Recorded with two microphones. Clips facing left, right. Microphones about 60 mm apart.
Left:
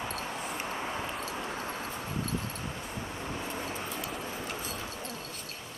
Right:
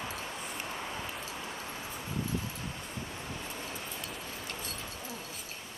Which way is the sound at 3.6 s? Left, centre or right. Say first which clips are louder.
Left 4 dB; centre.